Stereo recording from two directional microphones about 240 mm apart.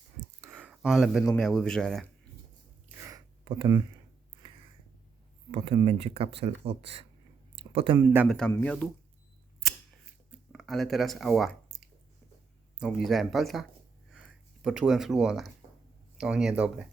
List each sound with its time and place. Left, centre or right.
0.4 s a sound: centre
1.4 s speech: centre
3.0 s a sound: centre
5.5 s speech: right
7.9 s speech: centre
10.5 s speech: centre